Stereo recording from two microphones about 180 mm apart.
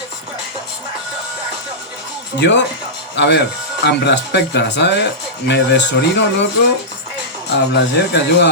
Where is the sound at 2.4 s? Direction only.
75° left (ahead or behind).